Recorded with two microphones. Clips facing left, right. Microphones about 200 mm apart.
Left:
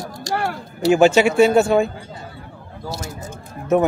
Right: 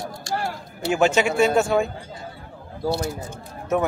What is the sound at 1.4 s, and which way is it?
Speech, 30° left (ahead or behind).